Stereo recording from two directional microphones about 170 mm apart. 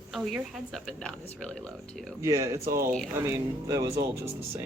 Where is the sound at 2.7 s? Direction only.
55° right (ahead or behind).